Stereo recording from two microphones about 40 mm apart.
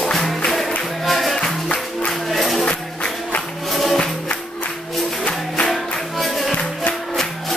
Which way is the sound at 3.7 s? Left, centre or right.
Centre.